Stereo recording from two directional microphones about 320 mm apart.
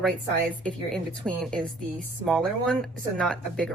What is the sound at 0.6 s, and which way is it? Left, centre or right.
A woman's voice, centre.